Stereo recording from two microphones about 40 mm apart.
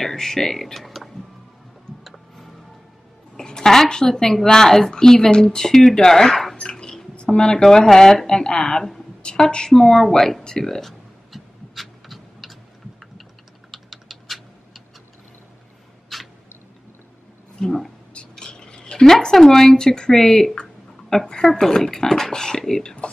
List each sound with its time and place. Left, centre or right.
0.0 s speech: centre
2.0 s music: centre
3.3 s a woman's voice: centre
6.7 s music: centre
7.2 s speech: left
7.6 s a woman's voice: centre
9.7 s a woman's voice: centre
11.3 s a sound: centre
13.7 s typing: centre
16.1 s cat: centre
17.6 s speech: centre
18.4 s a sound: left
19.0 s a woman's voice: centre